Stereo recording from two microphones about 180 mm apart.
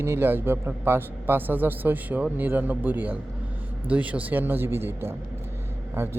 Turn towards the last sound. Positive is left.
turn(degrees=-15)  # may be behind; listen again after turning